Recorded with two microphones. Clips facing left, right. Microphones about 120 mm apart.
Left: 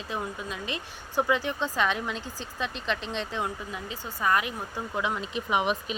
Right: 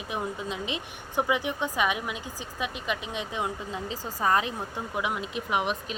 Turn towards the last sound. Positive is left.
turn(degrees=0)  # may be behind; listen again after turning